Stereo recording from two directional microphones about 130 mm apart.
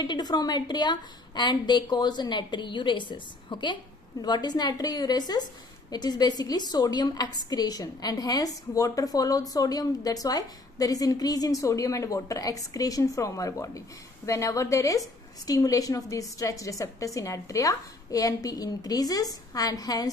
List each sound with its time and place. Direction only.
0.0 s a woman's voice: 35° left (ahead or behind)